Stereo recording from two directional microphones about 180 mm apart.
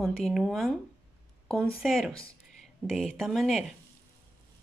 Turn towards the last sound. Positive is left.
turn(degrees=0)  # may be behind; listen again after turning